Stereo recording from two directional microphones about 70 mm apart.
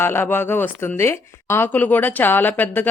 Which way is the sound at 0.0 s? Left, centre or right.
Left.